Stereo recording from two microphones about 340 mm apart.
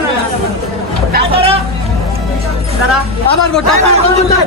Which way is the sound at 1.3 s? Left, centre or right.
Centre.